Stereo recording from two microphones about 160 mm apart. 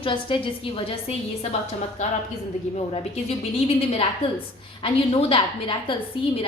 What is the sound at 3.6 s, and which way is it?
A woman's voice, 40° left (ahead or behind).